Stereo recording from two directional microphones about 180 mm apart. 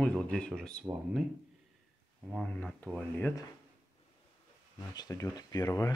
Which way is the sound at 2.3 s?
5° left (ahead or behind).